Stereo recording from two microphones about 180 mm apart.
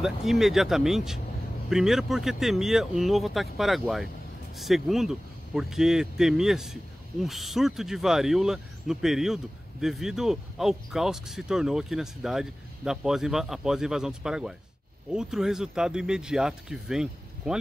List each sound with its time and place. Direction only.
0.0 s speech: centre (ahead or behind)